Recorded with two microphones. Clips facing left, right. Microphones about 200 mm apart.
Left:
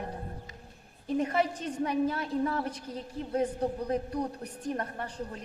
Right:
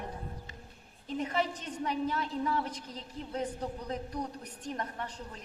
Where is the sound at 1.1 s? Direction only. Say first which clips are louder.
Left 5 dB; 50° left (ahead or behind).